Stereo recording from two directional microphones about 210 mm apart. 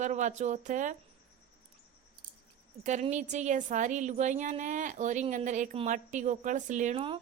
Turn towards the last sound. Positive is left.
turn(degrees=-30)  # may be behind; listen again after turning